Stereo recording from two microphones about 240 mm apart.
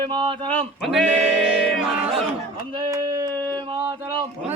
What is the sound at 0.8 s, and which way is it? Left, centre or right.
Speech, centre.